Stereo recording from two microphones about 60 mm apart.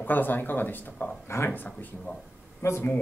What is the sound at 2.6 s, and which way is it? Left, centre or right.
Speech, left.